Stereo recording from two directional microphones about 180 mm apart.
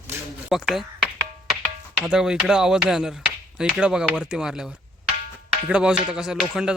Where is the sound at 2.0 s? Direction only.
5° right (ahead or behind).